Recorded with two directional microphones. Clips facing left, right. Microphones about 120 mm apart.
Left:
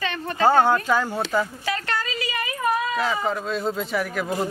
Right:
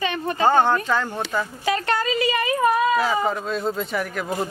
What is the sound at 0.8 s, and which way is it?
Speech, 10° left (ahead or behind).